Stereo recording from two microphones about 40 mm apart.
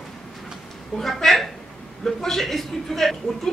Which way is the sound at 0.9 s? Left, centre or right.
Centre.